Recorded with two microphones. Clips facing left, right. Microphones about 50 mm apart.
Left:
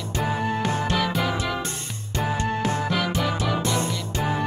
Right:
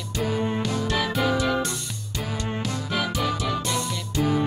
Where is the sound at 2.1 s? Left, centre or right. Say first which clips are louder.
Left 5 dB; left.